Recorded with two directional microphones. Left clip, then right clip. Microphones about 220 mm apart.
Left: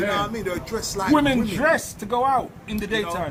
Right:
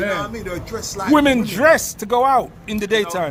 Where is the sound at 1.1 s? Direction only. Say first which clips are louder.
Right 6 dB; 55° right (ahead or behind).